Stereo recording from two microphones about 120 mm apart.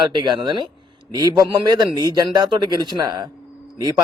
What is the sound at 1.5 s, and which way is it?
Speech, 40° right (ahead or behind).